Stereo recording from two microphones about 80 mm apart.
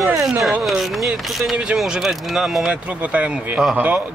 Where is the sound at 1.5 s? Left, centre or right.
Centre; by 4.0 s right.